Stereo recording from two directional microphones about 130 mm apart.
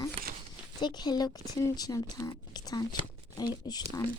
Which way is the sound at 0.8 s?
35° left (ahead or behind).